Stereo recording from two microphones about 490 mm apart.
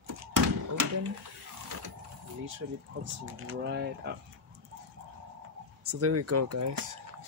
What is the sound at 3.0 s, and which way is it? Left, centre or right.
Speech, right.